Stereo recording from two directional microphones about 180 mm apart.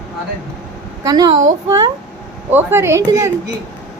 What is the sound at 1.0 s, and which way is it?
Speech, 25° right (ahead or behind).